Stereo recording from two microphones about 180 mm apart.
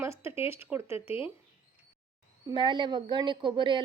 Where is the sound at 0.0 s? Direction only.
15° right (ahead or behind).